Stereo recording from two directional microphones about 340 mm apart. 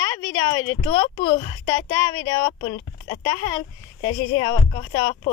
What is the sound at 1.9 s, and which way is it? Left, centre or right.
Speech, centre.